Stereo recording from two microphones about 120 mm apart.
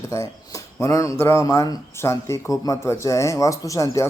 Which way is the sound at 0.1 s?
25° left (ahead or behind).